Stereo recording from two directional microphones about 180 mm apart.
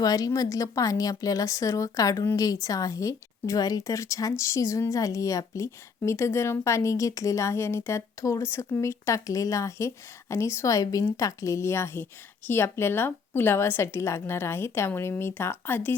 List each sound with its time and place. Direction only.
0.0 s a woman's voice: 20° left (ahead or behind)